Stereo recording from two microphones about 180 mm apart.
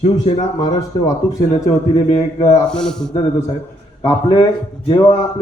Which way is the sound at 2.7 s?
5° left (ahead or behind).